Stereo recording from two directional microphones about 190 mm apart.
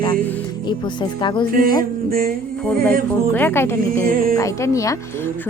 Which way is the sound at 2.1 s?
50° right (ahead or behind).